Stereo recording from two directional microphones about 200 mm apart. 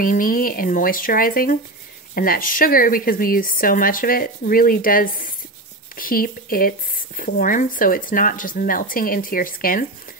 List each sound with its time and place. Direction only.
0.0 s speech: 45° left (ahead or behind)